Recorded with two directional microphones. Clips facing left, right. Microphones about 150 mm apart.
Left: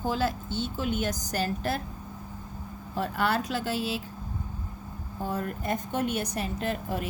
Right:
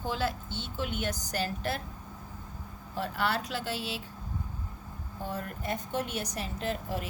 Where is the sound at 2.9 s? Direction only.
45° left (ahead or behind).